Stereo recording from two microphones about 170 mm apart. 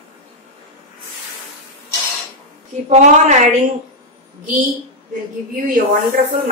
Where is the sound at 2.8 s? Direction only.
40° right (ahead or behind).